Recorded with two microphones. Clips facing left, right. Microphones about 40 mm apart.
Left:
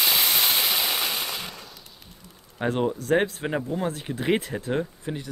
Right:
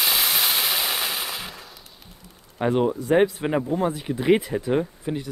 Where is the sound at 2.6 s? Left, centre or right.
Centre.